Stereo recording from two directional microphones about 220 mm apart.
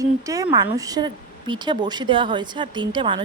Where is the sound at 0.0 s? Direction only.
15° right (ahead or behind).